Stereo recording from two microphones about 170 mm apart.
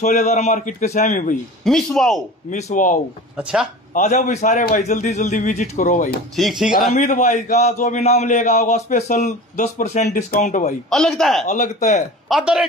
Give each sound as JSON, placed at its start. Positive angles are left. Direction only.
{"t": 0.0, "sound": "a man's voice", "side_deg": 45}
{"t": 1.6, "sound": "speech", "side_deg": 5}
{"t": 2.5, "sound": "a man's voice", "side_deg": 50}
{"t": 6.3, "sound": "speech", "side_deg": 0}
{"t": 7.0, "sound": "a man's voice", "side_deg": 45}
{"t": 10.0, "sound": "a man's voice", "side_deg": 55}
{"t": 10.9, "sound": "speech", "side_deg": 0}
{"t": 11.4, "sound": "a man's voice", "side_deg": 45}
{"t": 12.3, "sound": "speech", "side_deg": -5}